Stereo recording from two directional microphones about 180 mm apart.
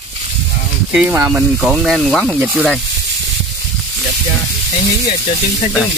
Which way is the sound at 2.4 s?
10° right (ahead or behind).